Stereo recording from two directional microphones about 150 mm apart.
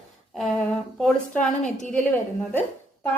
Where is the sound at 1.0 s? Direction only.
5° left (ahead or behind).